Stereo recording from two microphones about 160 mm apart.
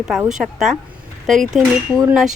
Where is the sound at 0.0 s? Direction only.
5° right (ahead or behind).